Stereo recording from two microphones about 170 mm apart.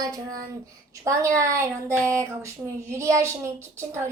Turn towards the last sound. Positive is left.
turn(degrees=-15)  # may be behind; listen again after turning